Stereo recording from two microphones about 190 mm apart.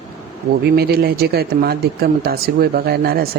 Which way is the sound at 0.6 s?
55° right (ahead or behind).